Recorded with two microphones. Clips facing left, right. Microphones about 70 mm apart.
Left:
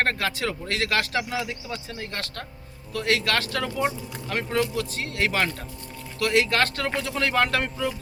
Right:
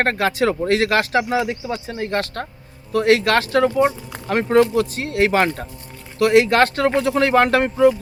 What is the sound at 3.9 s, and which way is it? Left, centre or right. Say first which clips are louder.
Speech: right 5 dB; right.